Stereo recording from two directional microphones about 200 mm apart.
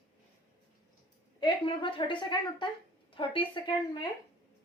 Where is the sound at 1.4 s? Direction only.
25° left (ahead or behind).